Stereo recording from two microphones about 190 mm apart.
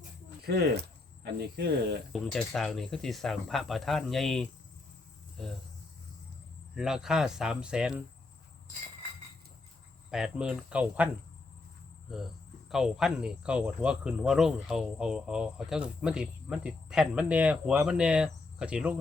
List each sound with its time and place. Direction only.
0.4 s speech: 55° right (ahead or behind)
2.1 s speech: centre (ahead or behind)
6.7 s speech: 5° right (ahead or behind)
10.1 s speech: 5° right (ahead or behind)
12.0 s cricket: centre (ahead or behind)
12.7 s speech: 5° right (ahead or behind)